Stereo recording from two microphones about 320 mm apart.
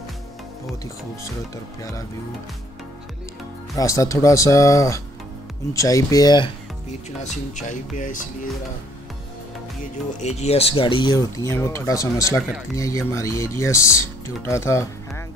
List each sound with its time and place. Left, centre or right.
3.7 s speech: centre
10.2 s speech: centre